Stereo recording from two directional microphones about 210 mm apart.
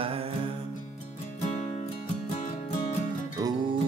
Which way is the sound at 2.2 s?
30° left (ahead or behind).